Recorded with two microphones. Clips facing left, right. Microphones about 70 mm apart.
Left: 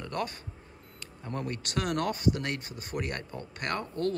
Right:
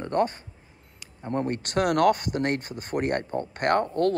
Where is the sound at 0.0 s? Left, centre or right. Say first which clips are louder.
Right 9 dB; right.